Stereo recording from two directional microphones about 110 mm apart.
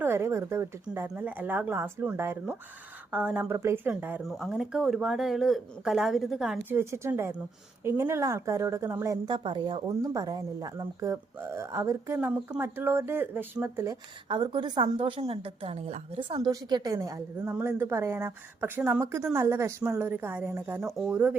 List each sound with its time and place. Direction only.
0.0 s a woman's voice: 25° right (ahead or behind)
3.5 s speech: 25° right (ahead or behind)
4.2 s speech: centre (ahead or behind)
6.7 s speech: 25° right (ahead or behind)
9.2 s a woman's voice: 45° right (ahead or behind)
10.0 s speech: 35° right (ahead or behind)
14.3 s a woman's voice: 45° right (ahead or behind)
16.5 s a woman's voice: 40° right (ahead or behind); by 19.0 s 10° right (ahead or behind)
19.3 s a woman's voice: 25° right (ahead or behind)